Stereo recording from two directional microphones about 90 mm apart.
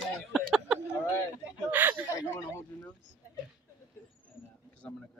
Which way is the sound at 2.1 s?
30° left (ahead or behind).